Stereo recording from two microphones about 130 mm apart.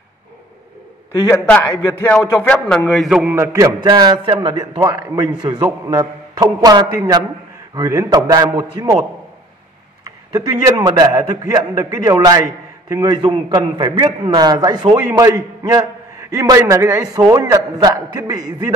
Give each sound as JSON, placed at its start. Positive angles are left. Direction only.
{"t": 1.3, "sound": "a man's voice", "side_deg": 20}
{"t": 3.3, "sound": "a man's voice", "side_deg": -25}
{"t": 10.0, "sound": "a man's voice", "side_deg": -30}
{"t": 13.2, "sound": "a man's voice", "side_deg": -45}